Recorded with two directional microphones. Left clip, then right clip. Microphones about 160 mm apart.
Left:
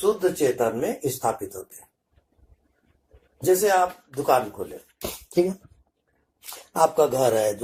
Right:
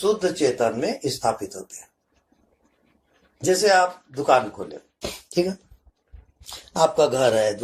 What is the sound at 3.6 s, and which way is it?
Speech, 45° left (ahead or behind).